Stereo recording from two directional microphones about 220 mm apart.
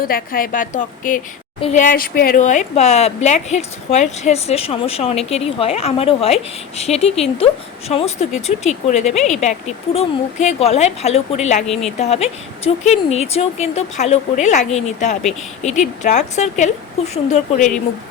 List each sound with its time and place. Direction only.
0.0 s a woman's voice: 40° left (ahead or behind)
11.6 s speech: centre (ahead or behind)
11.9 s a woman's voice: 30° left (ahead or behind)